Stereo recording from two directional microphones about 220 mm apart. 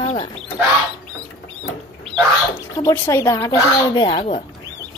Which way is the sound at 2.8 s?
10° left (ahead or behind).